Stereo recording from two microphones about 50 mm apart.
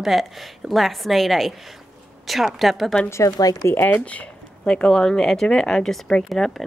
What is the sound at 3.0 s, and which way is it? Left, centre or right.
Speech, left.